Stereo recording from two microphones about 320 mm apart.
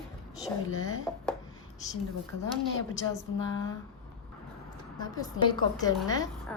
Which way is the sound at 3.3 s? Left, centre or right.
Left.